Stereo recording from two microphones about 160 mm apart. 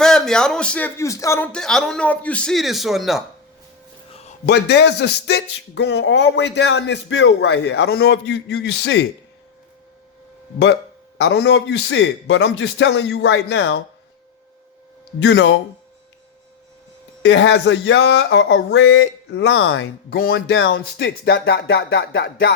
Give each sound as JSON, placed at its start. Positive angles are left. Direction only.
{"t": 0.0, "sound": "speech", "side_deg": 5}
{"t": 1.5, "sound": "a man's voice", "side_deg": 5}
{"t": 4.1, "sound": "a sound", "side_deg": 40}
{"t": 4.4, "sound": "speech", "side_deg": 90}
{"t": 11.2, "sound": "speech", "side_deg": 90}
{"t": 15.2, "sound": "speech", "side_deg": 90}
{"t": 17.2, "sound": "speech", "side_deg": 90}